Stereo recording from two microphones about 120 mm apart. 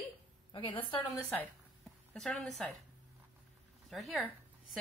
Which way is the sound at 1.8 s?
5° left (ahead or behind).